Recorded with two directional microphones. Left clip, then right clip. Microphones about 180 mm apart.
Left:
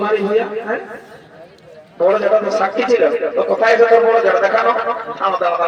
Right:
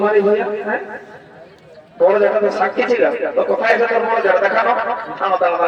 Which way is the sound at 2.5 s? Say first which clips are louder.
Left 1 dB; 20° left (ahead or behind).